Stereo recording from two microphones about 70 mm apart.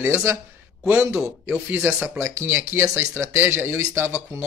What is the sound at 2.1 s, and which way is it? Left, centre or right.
Speech, right.